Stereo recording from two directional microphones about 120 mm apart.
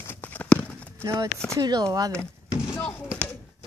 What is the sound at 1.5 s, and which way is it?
Speech, 35° right (ahead or behind).